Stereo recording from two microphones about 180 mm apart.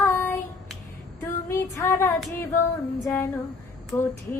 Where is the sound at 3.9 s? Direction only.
10° left (ahead or behind).